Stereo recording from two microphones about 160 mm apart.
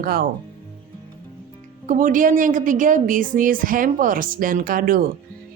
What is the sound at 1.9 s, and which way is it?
Speech, 55° right (ahead or behind).